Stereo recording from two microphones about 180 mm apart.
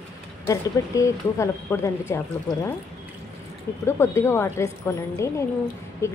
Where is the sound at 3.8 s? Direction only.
15° left (ahead or behind).